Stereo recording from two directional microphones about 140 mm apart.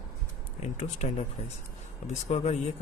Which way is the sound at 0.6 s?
60° left (ahead or behind).